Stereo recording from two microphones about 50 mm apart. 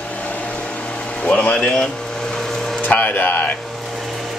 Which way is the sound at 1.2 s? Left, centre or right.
Left.